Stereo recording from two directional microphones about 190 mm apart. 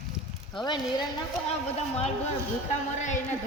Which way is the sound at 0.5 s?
25° left (ahead or behind).